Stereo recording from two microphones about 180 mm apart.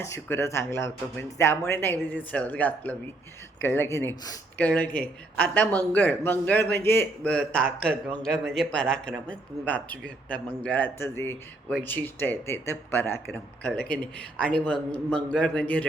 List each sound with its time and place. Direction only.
0.0 s speech: 15° left (ahead or behind)